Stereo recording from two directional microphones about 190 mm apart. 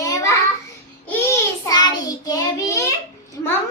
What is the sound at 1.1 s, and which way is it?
Child singing, 15° left (ahead or behind).